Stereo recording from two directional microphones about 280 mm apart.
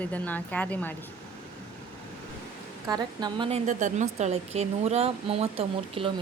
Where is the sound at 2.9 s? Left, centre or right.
Centre.